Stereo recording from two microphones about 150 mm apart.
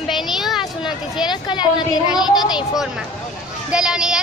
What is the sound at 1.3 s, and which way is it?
A woman's voice, 30° left (ahead or behind).